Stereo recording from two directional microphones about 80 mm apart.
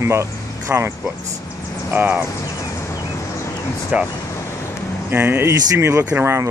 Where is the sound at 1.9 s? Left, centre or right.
Right.